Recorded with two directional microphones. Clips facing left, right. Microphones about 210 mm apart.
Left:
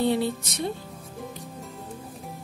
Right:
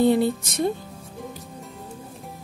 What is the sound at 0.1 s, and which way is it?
Speech, 50° right (ahead or behind).